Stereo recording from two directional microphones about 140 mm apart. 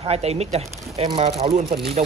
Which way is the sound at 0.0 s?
50° right (ahead or behind).